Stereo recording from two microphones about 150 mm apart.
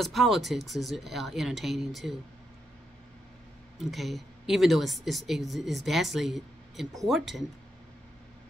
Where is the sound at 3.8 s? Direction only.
Centre (ahead or behind).